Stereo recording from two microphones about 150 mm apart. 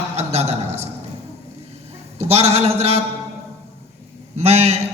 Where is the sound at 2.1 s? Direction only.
45° right (ahead or behind).